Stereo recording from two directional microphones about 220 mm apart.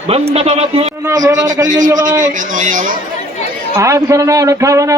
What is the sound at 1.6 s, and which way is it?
A man's voice, 35° right (ahead or behind).